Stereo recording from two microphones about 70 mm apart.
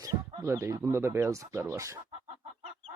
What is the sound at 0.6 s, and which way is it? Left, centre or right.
Speech, right.